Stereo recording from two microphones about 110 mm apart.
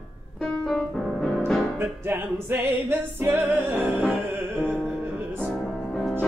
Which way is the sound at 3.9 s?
5° left (ahead or behind).